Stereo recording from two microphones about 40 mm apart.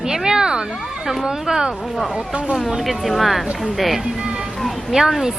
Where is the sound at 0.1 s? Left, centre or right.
Centre.